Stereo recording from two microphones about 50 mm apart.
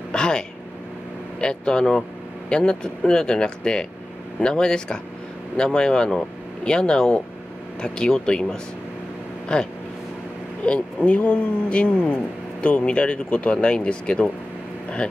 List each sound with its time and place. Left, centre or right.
0.1 s speech: centre